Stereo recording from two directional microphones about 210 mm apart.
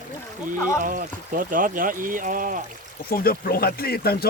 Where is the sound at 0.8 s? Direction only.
40° right (ahead or behind).